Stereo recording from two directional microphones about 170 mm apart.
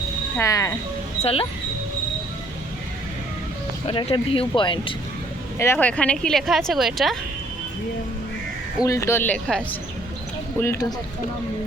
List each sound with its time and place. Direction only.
0.3 s speech: 20° left (ahead or behind)
1.2 s speech: 35° left (ahead or behind)
3.8 s speech: 30° left (ahead or behind)
5.5 s speech: 10° left (ahead or behind)
8.8 s speech: 20° left (ahead or behind)
10.6 s speech: 20° left (ahead or behind)